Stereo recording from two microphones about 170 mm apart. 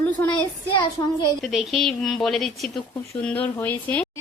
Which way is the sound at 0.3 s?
30° left (ahead or behind).